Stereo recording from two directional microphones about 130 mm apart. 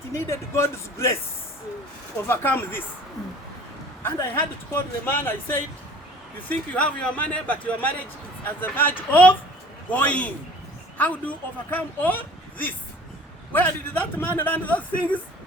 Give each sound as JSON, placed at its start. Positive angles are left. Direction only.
{"t": 0.1, "sound": "speech", "side_deg": 20}
{"t": 2.2, "sound": "a woman's voice", "side_deg": 15}
{"t": 4.7, "sound": "a woman's voice", "side_deg": 15}